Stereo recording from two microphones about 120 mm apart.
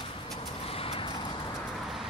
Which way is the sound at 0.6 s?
55° left (ahead or behind).